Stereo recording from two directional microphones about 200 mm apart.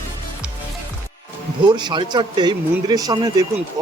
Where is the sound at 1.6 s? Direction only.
20° right (ahead or behind).